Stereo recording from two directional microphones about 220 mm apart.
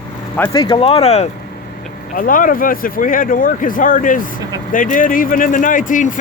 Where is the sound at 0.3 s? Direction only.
15° left (ahead or behind).